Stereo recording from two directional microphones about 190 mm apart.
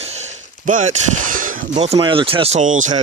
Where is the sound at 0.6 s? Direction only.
40° right (ahead or behind).